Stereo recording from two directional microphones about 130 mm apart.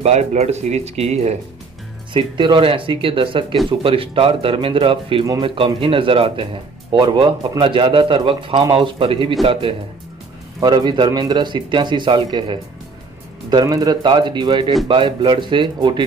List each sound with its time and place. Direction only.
0.0 s speech: 60° right (ahead or behind)
2.1 s speech: 40° right (ahead or behind)